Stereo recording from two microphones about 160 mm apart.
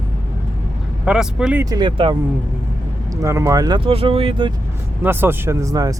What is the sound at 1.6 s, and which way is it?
Speech, 25° right (ahead or behind).